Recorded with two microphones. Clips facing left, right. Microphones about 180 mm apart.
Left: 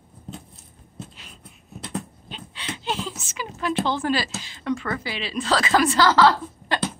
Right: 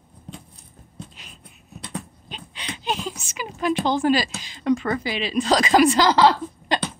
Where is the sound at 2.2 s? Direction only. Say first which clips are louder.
Left 1 dB; 15° right (ahead or behind).